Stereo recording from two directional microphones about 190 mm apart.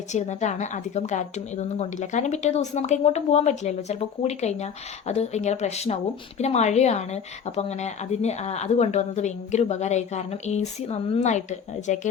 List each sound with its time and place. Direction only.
0.1 s speech: 35° left (ahead or behind)